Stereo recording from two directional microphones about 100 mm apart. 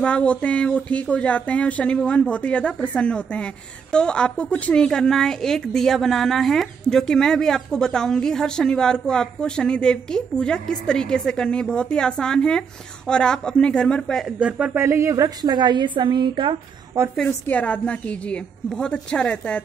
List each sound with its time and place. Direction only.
0.0 s a woman's voice: 10° left (ahead or behind)
14.2 s speech: 10° right (ahead or behind)
14.8 s a woman's voice: 30° right (ahead or behind); by 16.5 s 50° right (ahead or behind)
17.0 s a woman's voice: 25° right (ahead or behind)
17.5 s a woman's voice: 15° left (ahead or behind)